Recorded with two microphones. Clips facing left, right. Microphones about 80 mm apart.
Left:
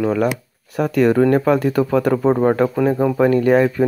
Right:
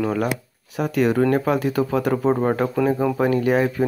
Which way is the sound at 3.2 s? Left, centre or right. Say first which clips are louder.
Left 6 dB; left.